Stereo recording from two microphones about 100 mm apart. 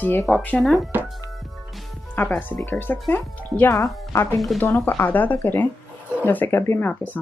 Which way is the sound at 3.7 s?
30° left (ahead or behind).